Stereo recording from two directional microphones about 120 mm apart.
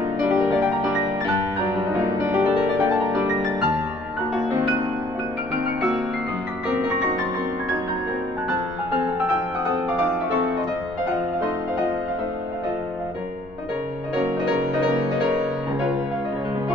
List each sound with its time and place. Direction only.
2.3 s music: 25° right (ahead or behind)